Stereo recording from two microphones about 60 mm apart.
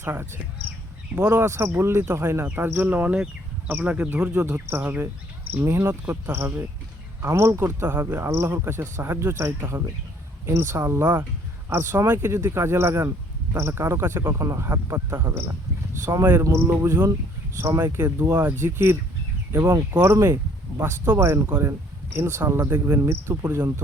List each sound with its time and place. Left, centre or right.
0.0 s speech: right
1.3 s speech: right
5.6 s speech: right
16.1 s speech: right
16.4 s speech: right
19.5 s speech: right
19.9 s speech: right